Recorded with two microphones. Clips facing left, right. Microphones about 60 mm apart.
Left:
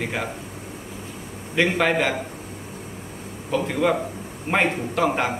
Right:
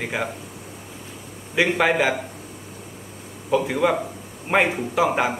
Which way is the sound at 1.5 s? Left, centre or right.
Centre.